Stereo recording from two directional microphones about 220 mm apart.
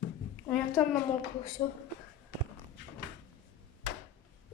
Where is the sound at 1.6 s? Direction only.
20° left (ahead or behind).